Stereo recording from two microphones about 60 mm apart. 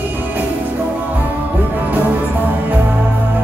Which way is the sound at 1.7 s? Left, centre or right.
Right.